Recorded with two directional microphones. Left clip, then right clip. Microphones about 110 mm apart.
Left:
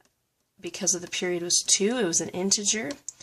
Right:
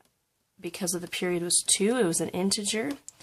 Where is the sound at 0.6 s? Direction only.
35° right (ahead or behind).